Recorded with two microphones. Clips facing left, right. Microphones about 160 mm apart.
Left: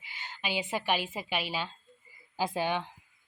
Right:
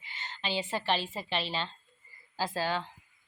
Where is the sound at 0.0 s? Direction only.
10° left (ahead or behind).